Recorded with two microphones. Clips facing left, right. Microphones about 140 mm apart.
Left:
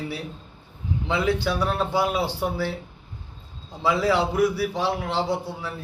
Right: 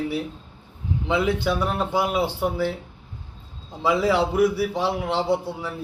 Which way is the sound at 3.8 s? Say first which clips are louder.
Right 1 dB; 15° right (ahead or behind).